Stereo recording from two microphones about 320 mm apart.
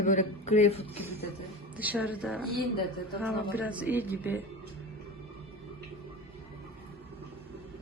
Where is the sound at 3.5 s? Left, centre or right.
Centre.